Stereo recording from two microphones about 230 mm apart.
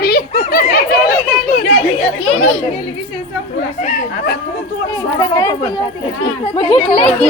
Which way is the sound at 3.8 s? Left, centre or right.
Left.